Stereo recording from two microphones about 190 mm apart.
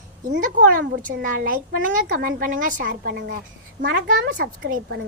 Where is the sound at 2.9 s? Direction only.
65° right (ahead or behind).